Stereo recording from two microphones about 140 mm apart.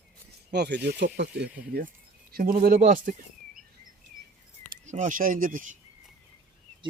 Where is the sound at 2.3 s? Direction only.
90° right.